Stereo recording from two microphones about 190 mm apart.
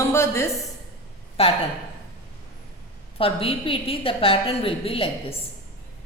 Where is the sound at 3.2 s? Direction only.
30° left (ahead or behind).